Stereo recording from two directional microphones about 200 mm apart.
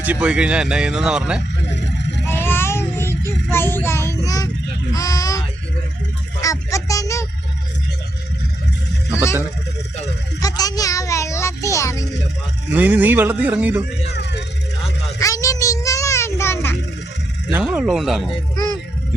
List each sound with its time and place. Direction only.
0.0 s speech: 5° right (ahead or behind)
1.7 s vehicle: 60° left (ahead or behind)
2.2 s child singing: 10° left (ahead or behind)
4.9 s a sound: 15° left (ahead or behind)
6.4 s a child's voice: 15° left (ahead or behind)
9.1 s a child's voice: 15° left (ahead or behind)
10.4 s a child's voice: 20° left (ahead or behind)
12.7 s speech: 10° right (ahead or behind)
14.1 s music: 55° left (ahead or behind)
15.2 s a sound: 15° left (ahead or behind)
17.5 s speech: 5° right (ahead or behind)